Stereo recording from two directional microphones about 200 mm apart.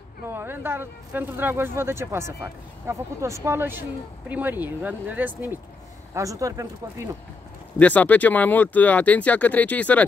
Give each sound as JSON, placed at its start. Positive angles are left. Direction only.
{"t": 0.3, "sound": "speech", "side_deg": -10}
{"t": 7.8, "sound": "speech", "side_deg": 10}